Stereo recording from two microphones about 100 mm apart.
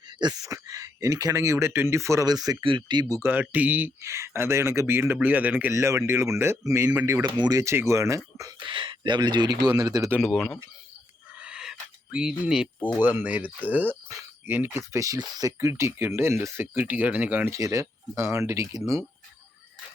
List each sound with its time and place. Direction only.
0.4 s speech: 35° right (ahead or behind)
2.6 s speech: 50° right (ahead or behind)
3.4 s speech: 15° right (ahead or behind)
4.0 s speech: 25° right (ahead or behind)
5.7 s speech: 30° right (ahead or behind)
7.2 s speech: 50° right (ahead or behind)
7.5 s speech: 30° right (ahead or behind)
8.5 s speech: 55° right (ahead or behind)
10.2 s speech: centre (ahead or behind)
11.3 s a sound: 10° right (ahead or behind)
13.0 s speech: 20° right (ahead or behind); by 15.7 s 35° right (ahead or behind)
15.7 s speech: 25° right (ahead or behind)
17.5 s speech: 30° right (ahead or behind)